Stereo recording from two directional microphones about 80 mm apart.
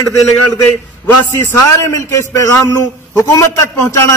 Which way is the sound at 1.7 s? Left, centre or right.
Left.